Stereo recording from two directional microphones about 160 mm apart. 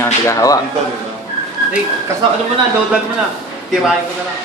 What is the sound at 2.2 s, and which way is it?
Speech, 30° right (ahead or behind).